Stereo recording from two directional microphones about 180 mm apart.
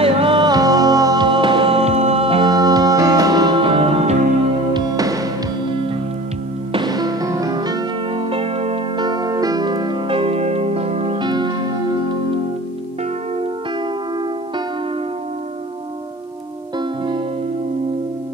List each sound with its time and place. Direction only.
0.0 s music: 30° right (ahead or behind)
4.7 s music: 20° right (ahead or behind)